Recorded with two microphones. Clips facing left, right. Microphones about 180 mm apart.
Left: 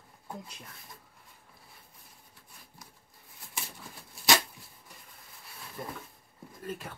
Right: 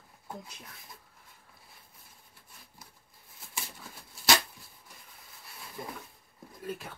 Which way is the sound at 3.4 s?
Centre (ahead or behind).